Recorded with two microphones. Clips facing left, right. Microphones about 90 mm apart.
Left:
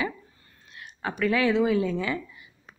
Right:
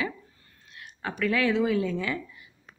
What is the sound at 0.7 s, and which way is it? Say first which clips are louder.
A woman's voice: left 2 dB; 20° left (ahead or behind).